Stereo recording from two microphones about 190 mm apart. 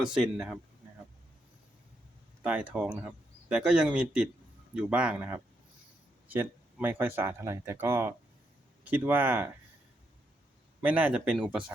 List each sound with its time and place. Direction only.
0.0 s speech: 5° right (ahead or behind)
2.4 s speech: 5° right (ahead or behind)
10.8 s speech: 10° right (ahead or behind)